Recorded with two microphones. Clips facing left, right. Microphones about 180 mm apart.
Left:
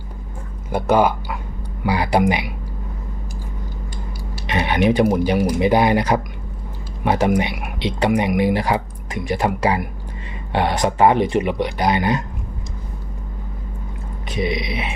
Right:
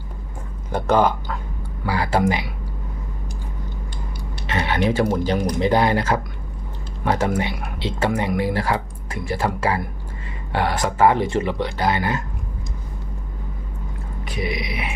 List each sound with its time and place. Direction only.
0.7 s speech: 10° left (ahead or behind)
4.4 s a sound: 15° left (ahead or behind)
5.1 s speech: 10° left (ahead or behind)
14.3 s speech: 25° left (ahead or behind)